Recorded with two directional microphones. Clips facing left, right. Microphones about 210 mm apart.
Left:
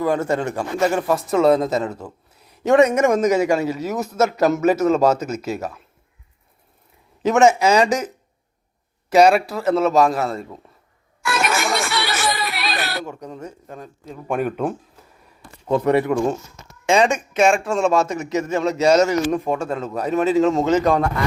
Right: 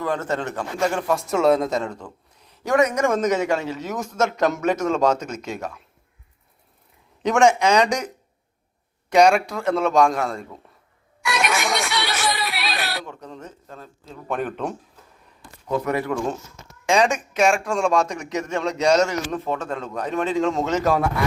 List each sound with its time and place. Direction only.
0.0 s speech: 10° left (ahead or behind)
2.6 s a man's voice: 25° left (ahead or behind)
3.1 s speech: 10° left (ahead or behind)
7.2 s a man's voice: 5° left (ahead or behind)
11.2 s music: centre (ahead or behind)
13.1 s speech: 10° left (ahead or behind)
15.6 s a man's voice: 30° left (ahead or behind)
16.0 s speech: 15° left (ahead or behind)
16.8 s a man's voice: centre (ahead or behind)